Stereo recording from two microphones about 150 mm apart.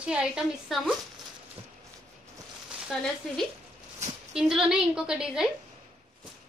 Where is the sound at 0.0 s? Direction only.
5° right (ahead or behind).